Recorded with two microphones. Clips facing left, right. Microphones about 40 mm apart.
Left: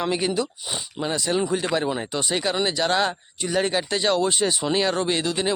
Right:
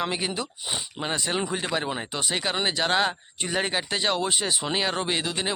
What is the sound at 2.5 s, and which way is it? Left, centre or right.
Speech, right.